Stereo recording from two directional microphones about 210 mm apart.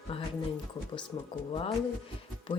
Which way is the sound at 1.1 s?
20° left (ahead or behind).